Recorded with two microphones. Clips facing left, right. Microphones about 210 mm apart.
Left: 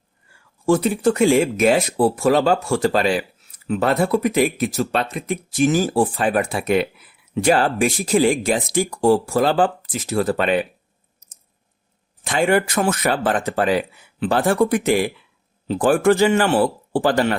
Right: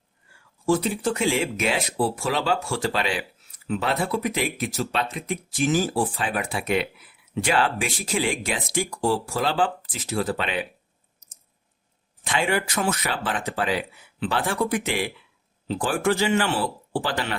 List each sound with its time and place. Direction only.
0.6 s speech: 55° left (ahead or behind)
12.2 s speech: 45° left (ahead or behind)